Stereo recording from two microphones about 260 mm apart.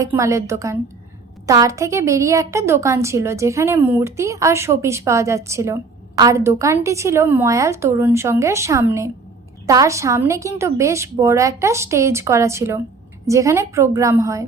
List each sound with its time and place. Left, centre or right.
0.0 s a woman's voice: centre